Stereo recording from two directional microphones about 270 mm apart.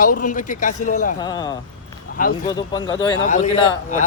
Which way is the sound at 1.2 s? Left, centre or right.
Centre.